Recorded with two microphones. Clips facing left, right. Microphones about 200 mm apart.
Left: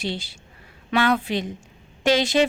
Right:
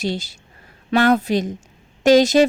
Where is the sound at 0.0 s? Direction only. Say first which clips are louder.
Right 5 dB; 40° right (ahead or behind).